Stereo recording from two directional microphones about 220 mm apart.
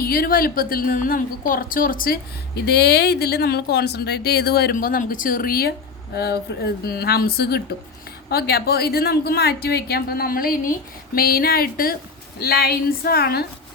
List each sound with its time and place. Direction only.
0.0 s a woman's voice: 40° left (ahead or behind)